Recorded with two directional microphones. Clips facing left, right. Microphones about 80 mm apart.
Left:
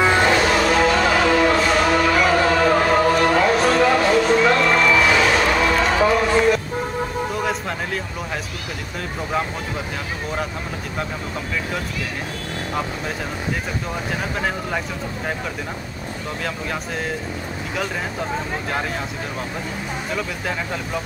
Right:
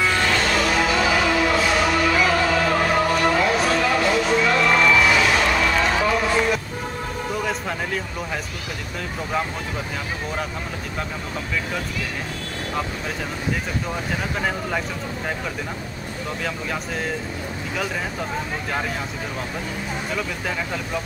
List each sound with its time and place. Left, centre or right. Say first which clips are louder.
0.0 s music: left 5 dB; left
0.4 s music: left 4 dB; centre
20.2 s speech: left 1 dB; centre